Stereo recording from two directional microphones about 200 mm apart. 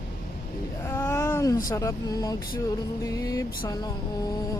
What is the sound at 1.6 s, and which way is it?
Speech, 15° left (ahead or behind).